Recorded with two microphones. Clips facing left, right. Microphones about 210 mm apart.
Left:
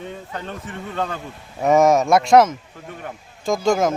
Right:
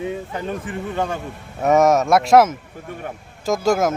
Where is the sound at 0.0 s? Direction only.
10° right (ahead or behind).